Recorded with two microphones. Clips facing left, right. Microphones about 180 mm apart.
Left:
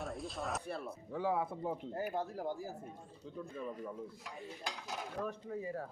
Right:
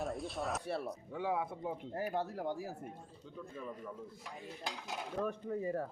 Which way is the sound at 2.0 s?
70° right (ahead or behind).